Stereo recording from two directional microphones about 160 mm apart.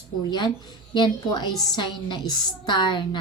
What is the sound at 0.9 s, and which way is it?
A woman's voice, 25° left (ahead or behind).